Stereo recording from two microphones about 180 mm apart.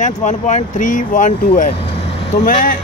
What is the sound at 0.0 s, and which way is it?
Speech, 40° left (ahead or behind).